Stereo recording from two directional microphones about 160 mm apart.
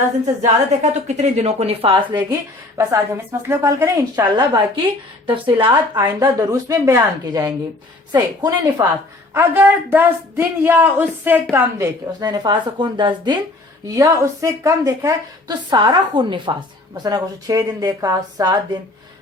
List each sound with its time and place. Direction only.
0.4 s a woman's voice: 45° right (ahead or behind); by 2.2 s 30° right (ahead or behind)
2.3 s a woman's voice: 20° right (ahead or behind)
12.3 s a woman's voice: 25° right (ahead or behind)